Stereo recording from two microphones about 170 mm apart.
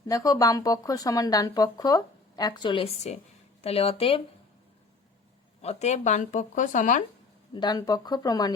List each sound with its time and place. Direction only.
0.1 s speech: 20° left (ahead or behind)
5.6 s speech: 40° left (ahead or behind)
7.5 s speech: 25° left (ahead or behind)